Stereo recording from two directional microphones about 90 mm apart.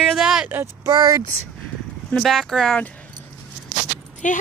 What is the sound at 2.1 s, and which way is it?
Speech, centre (ahead or behind).